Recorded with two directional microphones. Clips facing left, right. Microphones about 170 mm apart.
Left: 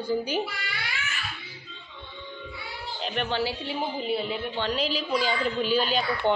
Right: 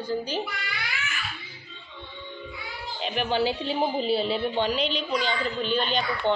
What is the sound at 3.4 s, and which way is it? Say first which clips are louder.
A woman's voice: right 4 dB; 25° right (ahead or behind).